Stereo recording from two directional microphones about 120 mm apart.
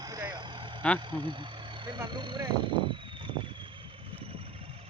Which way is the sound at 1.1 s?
40° right (ahead or behind).